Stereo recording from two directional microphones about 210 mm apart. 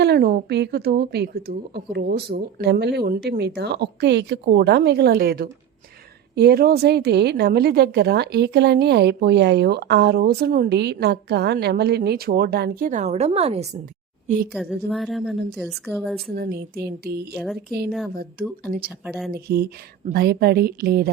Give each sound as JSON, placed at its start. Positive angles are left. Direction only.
{"t": 0.0, "sound": "a woman's voice", "side_deg": -50}
{"t": 12.9, "sound": "a woman's voice", "side_deg": -35}
{"t": 14.5, "sound": "a woman's voice", "side_deg": 0}
{"t": 16.3, "sound": "a woman's voice", "side_deg": -50}
{"t": 18.9, "sound": "a woman's voice", "side_deg": -5}
{"t": 19.3, "sound": "a woman's voice", "side_deg": -50}